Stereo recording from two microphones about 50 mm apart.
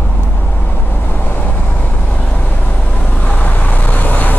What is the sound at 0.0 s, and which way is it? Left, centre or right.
Vehicle, left.